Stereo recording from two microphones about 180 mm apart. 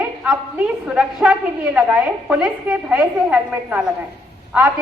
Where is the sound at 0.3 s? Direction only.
5° right (ahead or behind).